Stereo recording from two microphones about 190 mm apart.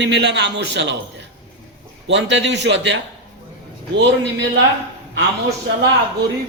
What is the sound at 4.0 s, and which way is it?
Speech, 75° right (ahead or behind).